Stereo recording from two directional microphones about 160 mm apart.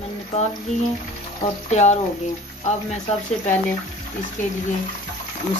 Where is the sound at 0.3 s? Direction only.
45° left (ahead or behind).